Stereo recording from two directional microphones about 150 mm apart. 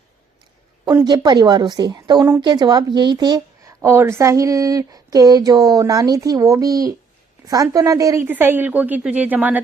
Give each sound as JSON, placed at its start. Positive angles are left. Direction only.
{"t": 1.0, "sound": "a woman's voice", "side_deg": -30}